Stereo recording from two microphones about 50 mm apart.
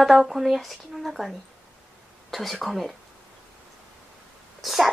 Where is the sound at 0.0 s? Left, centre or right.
Centre.